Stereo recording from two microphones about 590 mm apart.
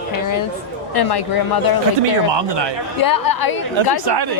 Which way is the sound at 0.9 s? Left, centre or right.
Left.